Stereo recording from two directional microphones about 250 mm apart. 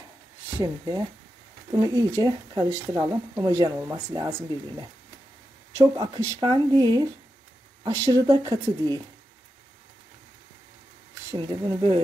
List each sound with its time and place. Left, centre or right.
0.6 s speech: centre
11.3 s speech: centre